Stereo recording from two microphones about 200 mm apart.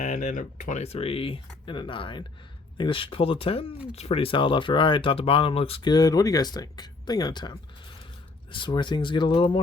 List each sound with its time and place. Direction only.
0.0 s speech: 40° left (ahead or behind)